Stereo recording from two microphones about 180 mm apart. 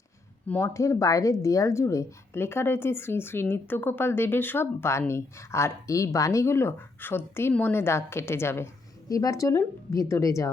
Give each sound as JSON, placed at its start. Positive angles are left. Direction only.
{"t": 0.4, "sound": "speech", "side_deg": 10}